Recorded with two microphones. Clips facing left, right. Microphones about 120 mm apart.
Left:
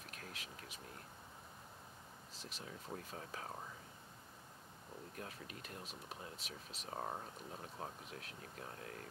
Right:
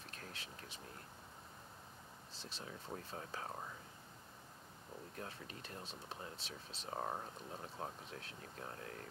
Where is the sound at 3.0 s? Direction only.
30° right (ahead or behind).